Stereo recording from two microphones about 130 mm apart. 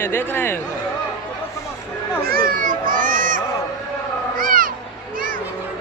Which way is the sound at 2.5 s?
90° right.